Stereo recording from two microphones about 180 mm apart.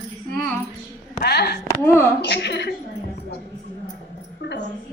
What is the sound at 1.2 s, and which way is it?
Speech, 65° left (ahead or behind).